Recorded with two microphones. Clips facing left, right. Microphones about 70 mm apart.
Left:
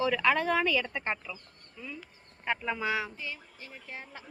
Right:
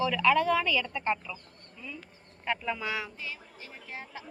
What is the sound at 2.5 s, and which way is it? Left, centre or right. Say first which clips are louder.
Speech: left 1 dB; centre.